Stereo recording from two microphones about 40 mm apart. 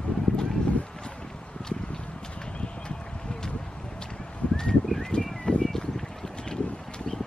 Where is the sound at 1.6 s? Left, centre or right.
Left.